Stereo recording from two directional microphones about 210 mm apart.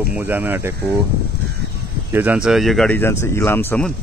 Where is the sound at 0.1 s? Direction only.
10° right (ahead or behind).